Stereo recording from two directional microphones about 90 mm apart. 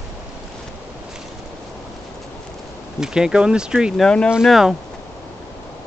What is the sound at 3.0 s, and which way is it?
Speech, 10° right (ahead or behind).